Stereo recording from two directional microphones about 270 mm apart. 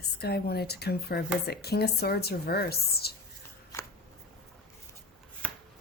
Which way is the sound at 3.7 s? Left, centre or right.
Centre.